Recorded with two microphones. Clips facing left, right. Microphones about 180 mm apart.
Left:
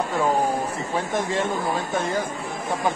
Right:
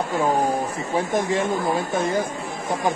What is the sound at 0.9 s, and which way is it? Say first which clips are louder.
Speech: right 3 dB; 15° right (ahead or behind).